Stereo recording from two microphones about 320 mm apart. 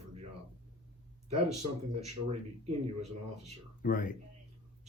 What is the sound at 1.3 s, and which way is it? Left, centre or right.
Speech, centre.